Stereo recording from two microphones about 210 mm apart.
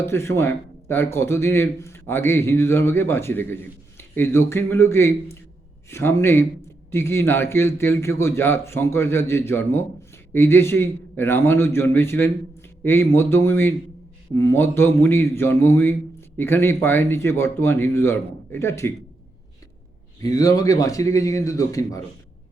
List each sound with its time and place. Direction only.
0.0 s a man's voice: 10° left (ahead or behind)
20.2 s a man's voice: 15° left (ahead or behind)